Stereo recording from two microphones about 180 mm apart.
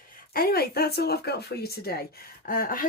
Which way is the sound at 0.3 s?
60° left (ahead or behind).